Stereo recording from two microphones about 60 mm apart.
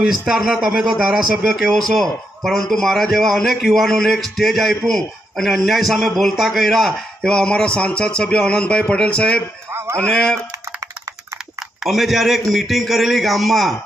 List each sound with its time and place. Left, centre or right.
0.1 s a man's voice: centre
9.7 s a sound: right
10.0 s speech: centre
11.8 s speech: centre